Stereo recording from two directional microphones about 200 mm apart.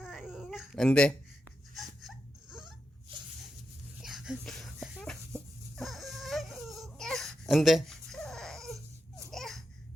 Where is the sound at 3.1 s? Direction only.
25° right (ahead or behind).